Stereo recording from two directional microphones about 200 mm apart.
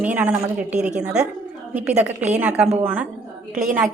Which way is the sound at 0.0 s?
10° right (ahead or behind).